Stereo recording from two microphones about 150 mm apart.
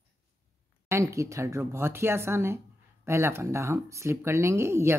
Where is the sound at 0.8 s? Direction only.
20° right (ahead or behind).